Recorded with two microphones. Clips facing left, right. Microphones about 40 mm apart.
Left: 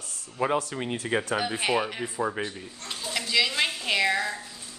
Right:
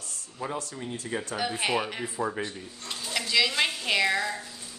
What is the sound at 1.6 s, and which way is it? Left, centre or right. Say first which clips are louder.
Speech: left 2 dB; centre.